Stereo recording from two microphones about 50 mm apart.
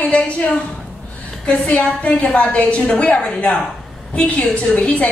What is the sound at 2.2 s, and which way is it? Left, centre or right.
A woman's voice, left.